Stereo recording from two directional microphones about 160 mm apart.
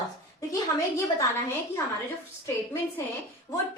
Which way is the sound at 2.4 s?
15° left (ahead or behind).